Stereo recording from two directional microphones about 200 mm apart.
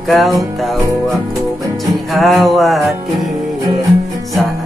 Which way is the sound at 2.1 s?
Centre (ahead or behind).